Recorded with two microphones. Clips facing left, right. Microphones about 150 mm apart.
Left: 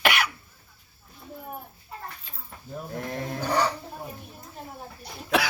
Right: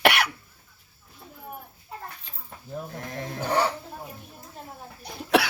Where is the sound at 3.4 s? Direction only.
25° right (ahead or behind).